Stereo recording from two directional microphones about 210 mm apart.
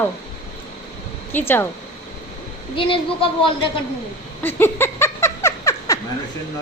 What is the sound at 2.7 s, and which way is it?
Speech, 25° left (ahead or behind).